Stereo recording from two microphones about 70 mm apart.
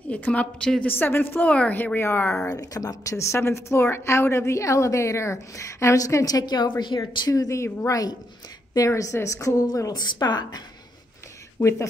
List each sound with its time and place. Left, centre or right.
0.1 s a woman's voice: left
0.8 s speech: left
1.5 s speech: centre
2.0 s speech: left
2.5 s a woman's voice: left
7.2 s a woman's voice: left